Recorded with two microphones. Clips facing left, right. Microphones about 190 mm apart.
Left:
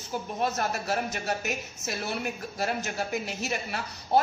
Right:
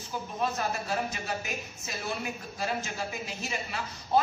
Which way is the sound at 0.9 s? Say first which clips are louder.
Left 3 dB; 70° left (ahead or behind).